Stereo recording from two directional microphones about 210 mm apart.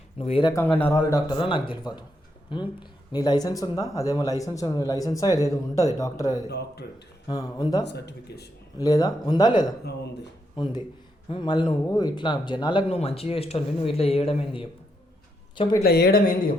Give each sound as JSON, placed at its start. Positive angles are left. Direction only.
{"t": 0.2, "sound": "speech", "side_deg": 25}
{"t": 0.5, "sound": "speech", "side_deg": 10}
{"t": 6.5, "sound": "speech", "side_deg": 50}
{"t": 7.3, "sound": "speech", "side_deg": 20}
{"t": 7.9, "sound": "speech", "side_deg": 55}
{"t": 8.8, "sound": "speech", "side_deg": 15}
{"t": 15.8, "sound": "speech", "side_deg": 50}